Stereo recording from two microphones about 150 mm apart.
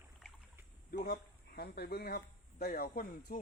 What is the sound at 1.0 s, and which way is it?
Speech, 75° left (ahead or behind).